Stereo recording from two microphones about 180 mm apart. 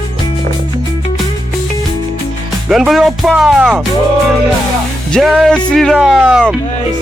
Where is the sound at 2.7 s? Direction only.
Centre (ahead or behind).